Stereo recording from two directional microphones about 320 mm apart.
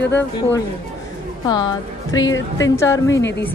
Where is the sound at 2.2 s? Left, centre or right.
Left.